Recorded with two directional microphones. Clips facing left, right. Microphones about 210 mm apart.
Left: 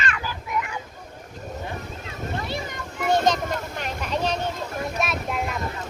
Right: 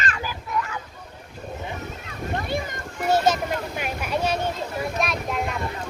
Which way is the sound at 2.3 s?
50° right (ahead or behind).